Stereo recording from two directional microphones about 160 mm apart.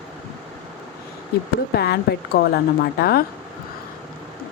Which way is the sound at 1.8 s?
85° left.